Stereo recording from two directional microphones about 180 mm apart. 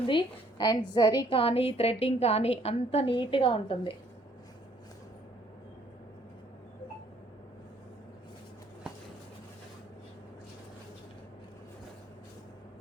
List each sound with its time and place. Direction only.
0.1 s a woman's voice: 25° left (ahead or behind)